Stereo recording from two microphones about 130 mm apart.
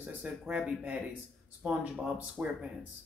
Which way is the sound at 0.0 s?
10° right (ahead or behind).